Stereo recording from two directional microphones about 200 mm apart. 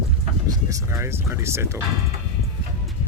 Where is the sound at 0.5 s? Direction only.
15° right (ahead or behind).